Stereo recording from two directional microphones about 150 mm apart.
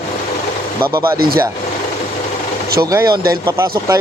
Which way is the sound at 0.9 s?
20° right (ahead or behind).